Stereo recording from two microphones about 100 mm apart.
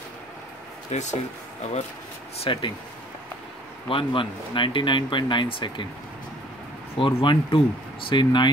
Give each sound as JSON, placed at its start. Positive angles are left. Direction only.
{"t": 0.9, "sound": "speech", "side_deg": 90}
{"t": 2.4, "sound": "speech", "side_deg": 60}
{"t": 3.9, "sound": "speech", "side_deg": 60}
{"t": 7.0, "sound": "speech", "side_deg": 55}